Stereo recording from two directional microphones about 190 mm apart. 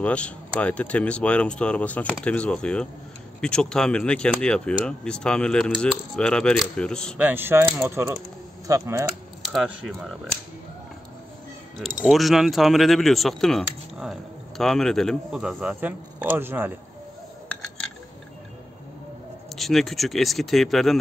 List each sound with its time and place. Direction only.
0.0 s speech: 5° left (ahead or behind)
7.2 s speech: 10° right (ahead or behind)
9.4 s speech: centre (ahead or behind)
12.0 s speech: centre (ahead or behind)
19.5 s speech: centre (ahead or behind)